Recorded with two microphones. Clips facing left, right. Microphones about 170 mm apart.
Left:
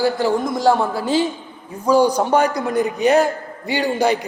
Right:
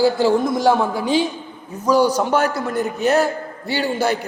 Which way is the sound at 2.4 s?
5° right (ahead or behind).